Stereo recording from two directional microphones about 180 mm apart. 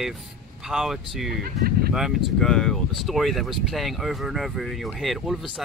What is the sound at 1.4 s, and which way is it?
Speech, 55° right (ahead or behind).